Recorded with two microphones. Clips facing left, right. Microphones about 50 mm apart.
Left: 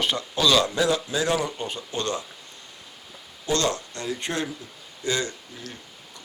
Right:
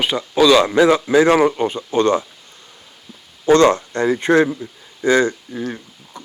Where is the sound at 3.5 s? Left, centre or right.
Right.